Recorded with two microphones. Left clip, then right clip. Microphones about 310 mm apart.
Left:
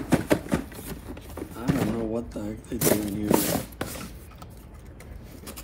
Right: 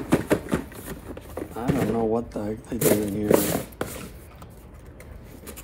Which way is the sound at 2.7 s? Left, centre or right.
Centre.